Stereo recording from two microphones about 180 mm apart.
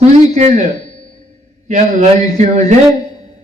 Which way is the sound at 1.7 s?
40° right (ahead or behind).